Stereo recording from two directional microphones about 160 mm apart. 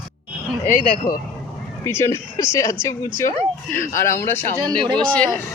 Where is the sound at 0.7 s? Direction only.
55° left (ahead or behind).